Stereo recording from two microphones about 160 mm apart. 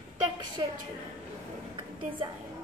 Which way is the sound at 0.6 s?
30° right (ahead or behind).